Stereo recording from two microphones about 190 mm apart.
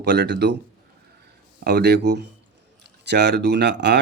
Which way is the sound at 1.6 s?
60° right (ahead or behind).